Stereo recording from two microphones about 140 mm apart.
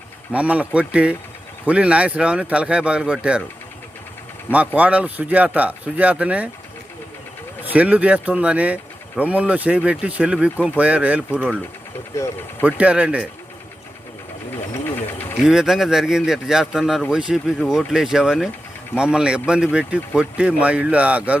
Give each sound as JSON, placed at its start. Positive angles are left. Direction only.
{"t": 0.3, "sound": "speech", "side_deg": -10}
{"t": 4.5, "sound": "speech", "side_deg": -10}
{"t": 7.6, "sound": "speech", "side_deg": -10}
{"t": 12.1, "sound": "speech", "side_deg": 20}
{"t": 12.6, "sound": "speech", "side_deg": -10}
{"t": 14.7, "sound": "a sound", "side_deg": 15}
{"t": 15.4, "sound": "speech", "side_deg": -5}